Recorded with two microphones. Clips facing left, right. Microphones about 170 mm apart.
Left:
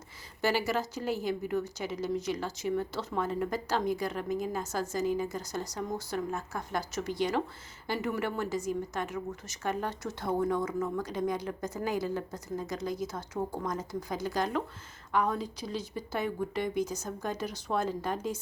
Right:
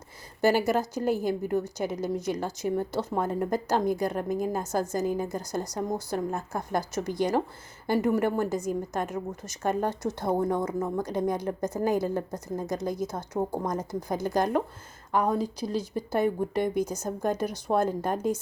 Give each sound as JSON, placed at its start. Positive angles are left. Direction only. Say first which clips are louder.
{"t": 0.4, "sound": "a woman's voice", "louder": "right 6 dB", "side_deg": -50}